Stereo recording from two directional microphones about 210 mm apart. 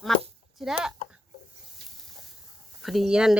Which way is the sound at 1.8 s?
55° right (ahead or behind).